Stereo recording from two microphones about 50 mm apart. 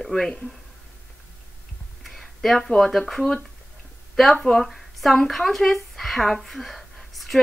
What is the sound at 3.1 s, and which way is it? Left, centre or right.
A woman's voice, centre.